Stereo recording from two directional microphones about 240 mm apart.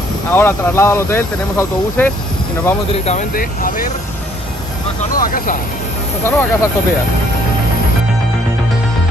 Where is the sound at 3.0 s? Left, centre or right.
Left.